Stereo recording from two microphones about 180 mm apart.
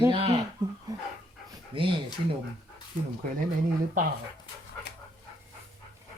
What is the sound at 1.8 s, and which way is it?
Speech, 30° right (ahead or behind).